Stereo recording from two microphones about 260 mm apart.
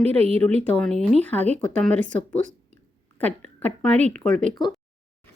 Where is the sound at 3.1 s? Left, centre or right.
Centre.